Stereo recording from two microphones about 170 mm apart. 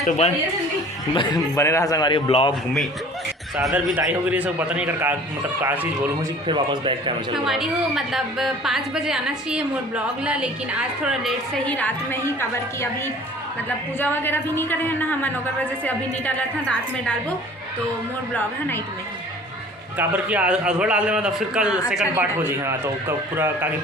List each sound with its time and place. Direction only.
1.1 s a man's voice: 30° left (ahead or behind)
1.5 s a man's voice: 15° left (ahead or behind)
3.6 s a man's voice: 5° right (ahead or behind)
6.5 s a man's voice: 30° right (ahead or behind)
7.4 s a woman's voice: centre (ahead or behind); by 12.9 s 15° left (ahead or behind)
14.0 s a woman's voice: 10° left (ahead or behind)
20.0 s a man's voice: 10° right (ahead or behind)